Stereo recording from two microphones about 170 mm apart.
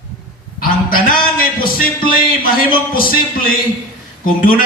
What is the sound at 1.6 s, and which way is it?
A man's voice, 60° left (ahead or behind).